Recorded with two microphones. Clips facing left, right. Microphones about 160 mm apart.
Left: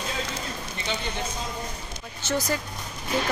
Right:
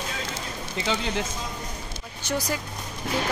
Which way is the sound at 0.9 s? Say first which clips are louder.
Right 4 dB; 90° right.